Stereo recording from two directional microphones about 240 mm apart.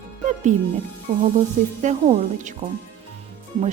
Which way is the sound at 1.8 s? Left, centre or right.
Right.